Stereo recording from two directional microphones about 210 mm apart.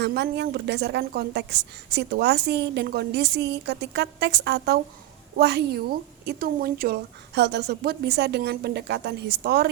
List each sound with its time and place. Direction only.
0.0 s a woman's voice: 55° right (ahead or behind)